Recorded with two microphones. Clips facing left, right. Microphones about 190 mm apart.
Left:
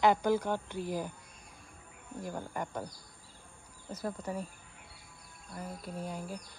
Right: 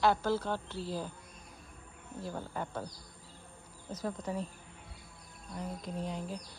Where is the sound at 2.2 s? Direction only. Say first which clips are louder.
Left 1 dB; 10° left (ahead or behind).